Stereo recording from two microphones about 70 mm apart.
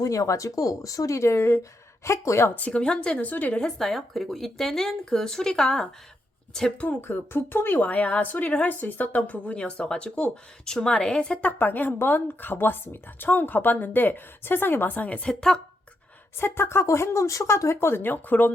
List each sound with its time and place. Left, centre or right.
0.0 s speech: left
2.6 s a woman's voice: centre
3.6 s a woman's voice: centre
6.8 s a woman's voice: left
11.5 s a woman's voice: left; by 15.6 s centre
16.4 s speech: left